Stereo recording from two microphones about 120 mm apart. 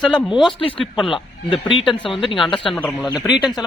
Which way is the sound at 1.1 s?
45° left (ahead or behind).